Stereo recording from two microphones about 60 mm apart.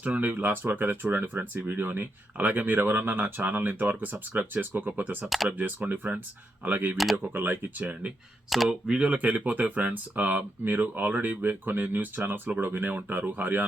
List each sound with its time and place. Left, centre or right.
0.0 s speech: right
5.2 s speech: centre
5.5 s speech: right
6.9 s speech: centre
7.2 s speech: right
8.4 s speech: centre
8.9 s speech: centre